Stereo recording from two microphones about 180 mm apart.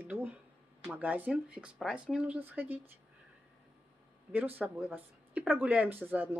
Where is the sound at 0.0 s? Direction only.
10° right (ahead or behind).